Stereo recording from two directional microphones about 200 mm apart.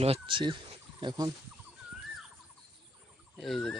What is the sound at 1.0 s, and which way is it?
Speech, 20° right (ahead or behind).